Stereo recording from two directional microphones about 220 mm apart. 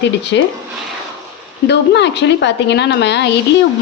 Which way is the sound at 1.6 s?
50° left (ahead or behind).